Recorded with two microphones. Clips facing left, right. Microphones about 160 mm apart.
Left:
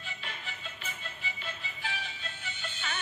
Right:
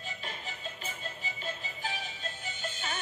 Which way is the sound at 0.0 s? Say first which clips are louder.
Right 2 dB; 40° right (ahead or behind).